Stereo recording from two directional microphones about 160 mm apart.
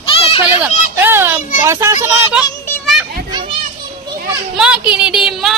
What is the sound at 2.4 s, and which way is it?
Child singing, 15° left (ahead or behind).